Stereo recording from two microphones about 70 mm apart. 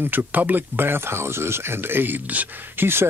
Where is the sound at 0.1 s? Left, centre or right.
Right.